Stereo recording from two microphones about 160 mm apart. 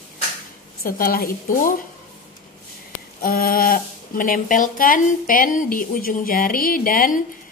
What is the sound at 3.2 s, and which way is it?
Speech, 65° left (ahead or behind).